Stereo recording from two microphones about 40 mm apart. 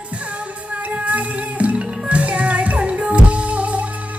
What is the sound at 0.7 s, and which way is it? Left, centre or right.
Music, right.